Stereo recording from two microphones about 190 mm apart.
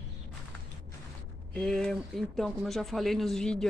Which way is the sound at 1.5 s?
5° left (ahead or behind).